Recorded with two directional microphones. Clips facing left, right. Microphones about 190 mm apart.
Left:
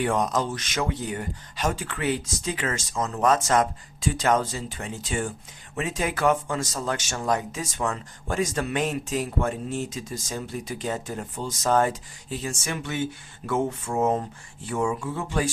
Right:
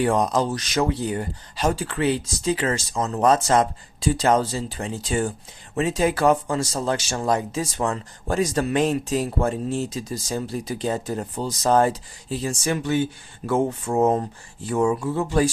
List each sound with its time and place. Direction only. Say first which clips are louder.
0.0 s speech: right 4 dB; 35° right (ahead or behind)